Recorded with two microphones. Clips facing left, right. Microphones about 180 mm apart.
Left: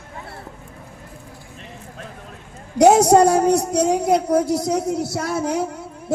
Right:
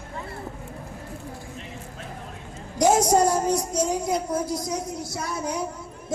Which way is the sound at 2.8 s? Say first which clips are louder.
Left 7 dB; 65° left (ahead or behind).